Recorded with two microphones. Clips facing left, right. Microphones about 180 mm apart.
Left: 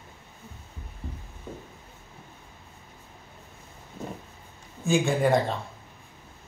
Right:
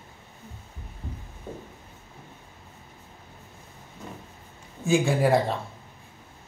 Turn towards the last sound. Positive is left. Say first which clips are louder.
# right 1 dB
turn(degrees=-5)  # may be behind; listen again after turning